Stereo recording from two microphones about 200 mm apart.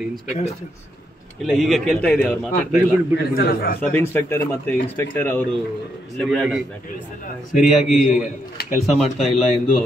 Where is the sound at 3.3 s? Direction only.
45° left (ahead or behind).